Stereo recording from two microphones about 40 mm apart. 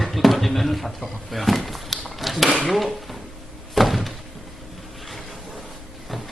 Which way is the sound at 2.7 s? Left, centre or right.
Centre.